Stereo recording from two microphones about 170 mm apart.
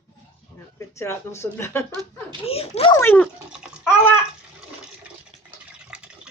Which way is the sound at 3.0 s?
10° left (ahead or behind).